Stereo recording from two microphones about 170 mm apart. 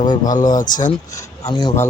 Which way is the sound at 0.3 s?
50° left (ahead or behind).